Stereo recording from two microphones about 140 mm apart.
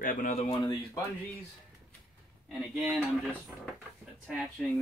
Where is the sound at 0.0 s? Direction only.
70° left (ahead or behind).